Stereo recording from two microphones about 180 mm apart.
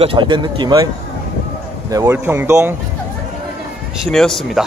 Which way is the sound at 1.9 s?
15° right (ahead or behind).